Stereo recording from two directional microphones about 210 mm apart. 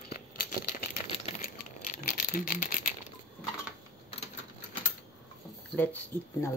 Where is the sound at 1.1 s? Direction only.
30° left (ahead or behind).